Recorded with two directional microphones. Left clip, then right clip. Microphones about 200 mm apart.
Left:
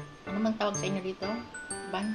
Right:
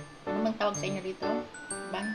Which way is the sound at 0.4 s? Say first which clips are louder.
Even; 15° left (ahead or behind).